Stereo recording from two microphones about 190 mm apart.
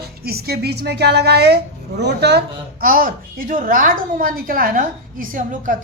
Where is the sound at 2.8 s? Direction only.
45° right (ahead or behind).